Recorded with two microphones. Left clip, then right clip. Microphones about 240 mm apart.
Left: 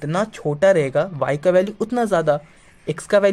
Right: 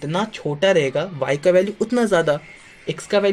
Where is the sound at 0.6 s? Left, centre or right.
Left.